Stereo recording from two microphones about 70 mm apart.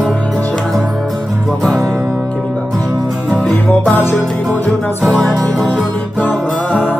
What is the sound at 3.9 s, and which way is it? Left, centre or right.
Music, left.